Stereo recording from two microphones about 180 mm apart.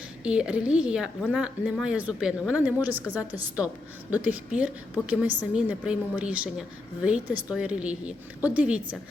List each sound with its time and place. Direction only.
0.3 s a woman's voice: 5° right (ahead or behind)